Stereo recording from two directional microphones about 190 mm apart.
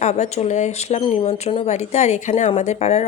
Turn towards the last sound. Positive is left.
turn(degrees=35)  # may be behind; listen again after turning